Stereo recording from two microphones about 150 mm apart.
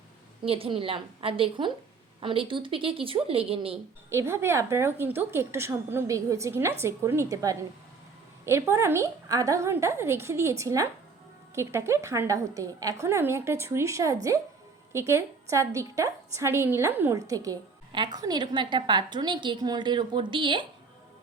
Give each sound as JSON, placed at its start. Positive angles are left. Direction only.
{"t": 0.4, "sound": "a woman's voice", "side_deg": -40}
{"t": 4.1, "sound": "a woman's voice", "side_deg": -20}